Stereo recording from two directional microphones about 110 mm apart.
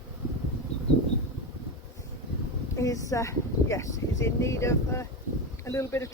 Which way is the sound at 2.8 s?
30° left (ahead or behind).